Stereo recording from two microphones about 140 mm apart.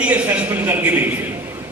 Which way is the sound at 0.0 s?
10° right (ahead or behind).